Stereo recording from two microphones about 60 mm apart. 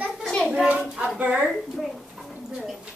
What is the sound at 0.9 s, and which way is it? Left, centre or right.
Speech, right.